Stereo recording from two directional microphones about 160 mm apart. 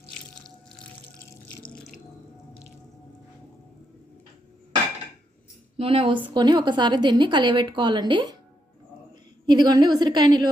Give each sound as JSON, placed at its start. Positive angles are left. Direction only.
{"t": 5.7, "sound": "a woman's voice", "side_deg": -35}
{"t": 9.5, "sound": "a woman's voice", "side_deg": -25}